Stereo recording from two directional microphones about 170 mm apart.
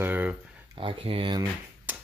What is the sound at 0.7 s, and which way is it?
Speech, 35° right (ahead or behind).